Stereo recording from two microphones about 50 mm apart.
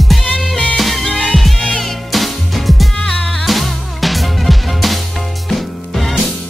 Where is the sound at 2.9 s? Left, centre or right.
Centre.